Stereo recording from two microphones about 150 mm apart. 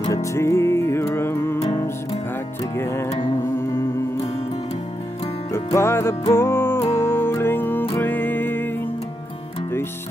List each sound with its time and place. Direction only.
0.1 s music: 20° left (ahead or behind)
5.5 s music: 15° left (ahead or behind)